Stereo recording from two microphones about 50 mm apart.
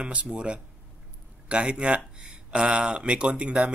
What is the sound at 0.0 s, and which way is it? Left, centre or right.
Speech, right.